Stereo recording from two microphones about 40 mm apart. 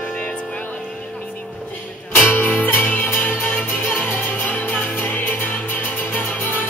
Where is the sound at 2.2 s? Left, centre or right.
Left.